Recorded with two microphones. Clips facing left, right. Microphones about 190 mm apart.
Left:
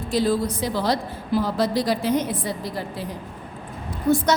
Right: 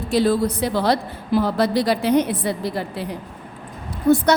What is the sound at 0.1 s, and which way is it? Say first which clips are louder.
A woman's voice: right 3 dB; 65° right (ahead or behind).